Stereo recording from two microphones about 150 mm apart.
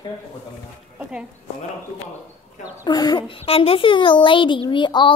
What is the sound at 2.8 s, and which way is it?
A child's voice, 25° left (ahead or behind).